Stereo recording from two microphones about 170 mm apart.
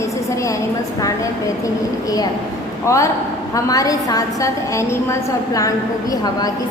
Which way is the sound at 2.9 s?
20° left (ahead or behind).